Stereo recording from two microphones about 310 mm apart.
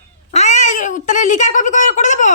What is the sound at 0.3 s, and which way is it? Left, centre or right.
Cat, left.